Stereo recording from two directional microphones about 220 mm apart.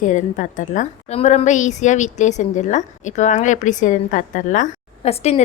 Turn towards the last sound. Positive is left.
turn(degrees=30)  # may be behind; listen again after turning